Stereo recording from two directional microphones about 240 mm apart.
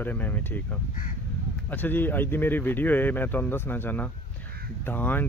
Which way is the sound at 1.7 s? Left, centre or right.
Centre.